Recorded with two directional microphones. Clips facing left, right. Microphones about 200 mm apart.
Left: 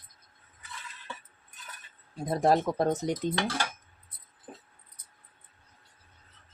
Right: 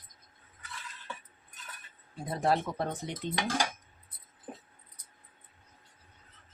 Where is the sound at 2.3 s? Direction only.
40° left (ahead or behind).